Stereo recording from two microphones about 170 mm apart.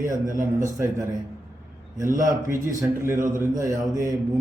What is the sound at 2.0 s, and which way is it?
Speech, 50° right (ahead or behind).